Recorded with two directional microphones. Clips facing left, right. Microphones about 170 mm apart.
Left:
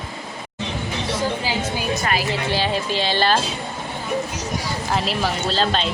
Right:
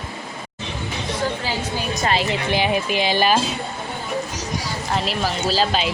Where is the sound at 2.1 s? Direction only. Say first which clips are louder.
Right 5 dB; 20° right (ahead or behind).